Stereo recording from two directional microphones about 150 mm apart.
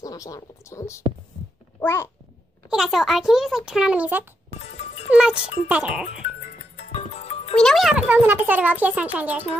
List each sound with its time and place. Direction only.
0.0 s speech: 25° left (ahead or behind)
1.8 s babbling: 15° left (ahead or behind)
2.7 s a child's voice: centre (ahead or behind)
6.8 s music: 45° left (ahead or behind)
7.5 s a child's voice: centre (ahead or behind)